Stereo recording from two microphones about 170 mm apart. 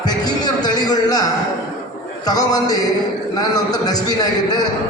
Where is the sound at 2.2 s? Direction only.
20° left (ahead or behind).